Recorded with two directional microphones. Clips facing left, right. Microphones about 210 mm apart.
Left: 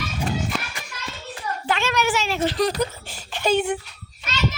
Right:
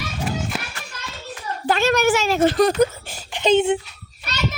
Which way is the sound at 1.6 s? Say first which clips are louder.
Right 6 dB; 40° right (ahead or behind).